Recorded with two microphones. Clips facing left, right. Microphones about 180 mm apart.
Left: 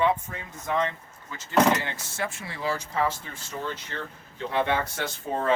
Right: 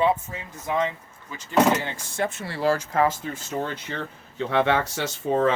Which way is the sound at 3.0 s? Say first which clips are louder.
Right 5 dB; 45° right (ahead or behind).